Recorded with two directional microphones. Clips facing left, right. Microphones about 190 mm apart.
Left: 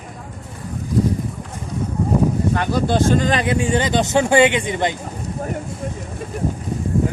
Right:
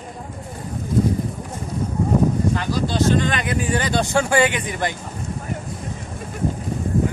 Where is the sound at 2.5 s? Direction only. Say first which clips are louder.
Left 4 dB; 55° left (ahead or behind); by 5.0 s 20° left (ahead or behind).